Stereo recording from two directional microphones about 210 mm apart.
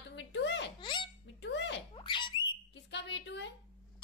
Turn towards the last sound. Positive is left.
turn(degrees=55)  # may be behind; listen again after turning